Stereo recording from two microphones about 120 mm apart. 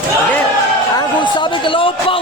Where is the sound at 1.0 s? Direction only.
40° left (ahead or behind).